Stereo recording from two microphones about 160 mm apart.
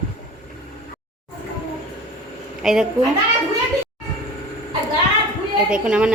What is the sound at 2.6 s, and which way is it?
Speech, 5° right (ahead or behind).